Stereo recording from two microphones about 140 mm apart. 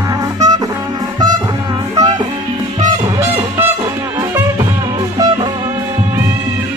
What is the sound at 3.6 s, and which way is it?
Music, 15° right (ahead or behind).